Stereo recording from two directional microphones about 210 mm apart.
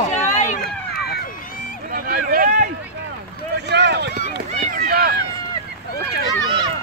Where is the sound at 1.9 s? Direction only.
45° right (ahead or behind).